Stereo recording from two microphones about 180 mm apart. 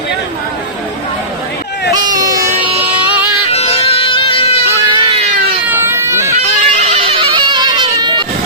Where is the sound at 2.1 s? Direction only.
20° right (ahead or behind).